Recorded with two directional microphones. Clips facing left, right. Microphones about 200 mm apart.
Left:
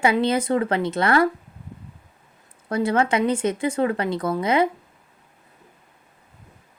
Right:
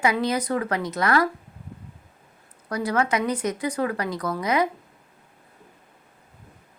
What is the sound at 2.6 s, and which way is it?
Speech, 25° left (ahead or behind).